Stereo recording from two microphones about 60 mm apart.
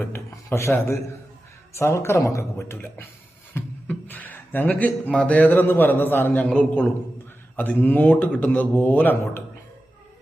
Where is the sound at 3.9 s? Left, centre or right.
Left.